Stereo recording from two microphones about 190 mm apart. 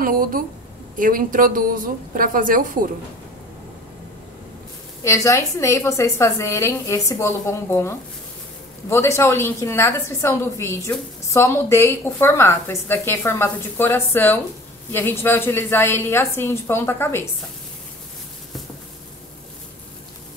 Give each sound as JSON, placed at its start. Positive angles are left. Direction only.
{"t": 0.0, "sound": "a woman's voice", "side_deg": -50}
{"t": 5.0, "sound": "a woman's voice", "side_deg": 15}